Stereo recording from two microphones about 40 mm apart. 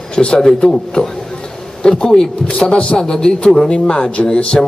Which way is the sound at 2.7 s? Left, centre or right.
Left.